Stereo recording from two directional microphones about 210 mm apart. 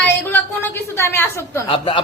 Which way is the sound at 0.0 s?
10° left (ahead or behind).